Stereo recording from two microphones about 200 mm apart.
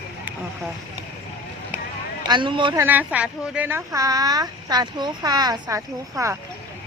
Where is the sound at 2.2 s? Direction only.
25° right (ahead or behind).